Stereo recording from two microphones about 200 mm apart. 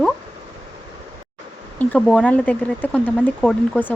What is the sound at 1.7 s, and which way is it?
Speech, 5° left (ahead or behind).